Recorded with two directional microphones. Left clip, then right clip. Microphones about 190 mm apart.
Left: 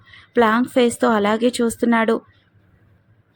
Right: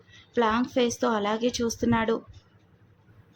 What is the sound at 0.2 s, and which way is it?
A woman's voice, 25° left (ahead or behind).